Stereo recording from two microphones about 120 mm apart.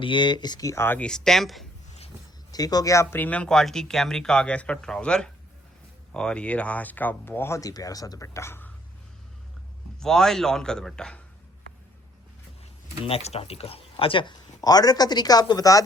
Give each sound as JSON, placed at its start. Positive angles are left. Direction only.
{"t": 0.0, "sound": "speech", "side_deg": 40}
{"t": 2.5, "sound": "speech", "side_deg": 30}
{"t": 10.0, "sound": "a man's voice", "side_deg": 5}
{"t": 13.1, "sound": "speech", "side_deg": 55}